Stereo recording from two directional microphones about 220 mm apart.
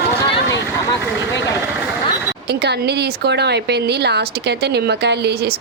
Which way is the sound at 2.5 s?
50° right (ahead or behind).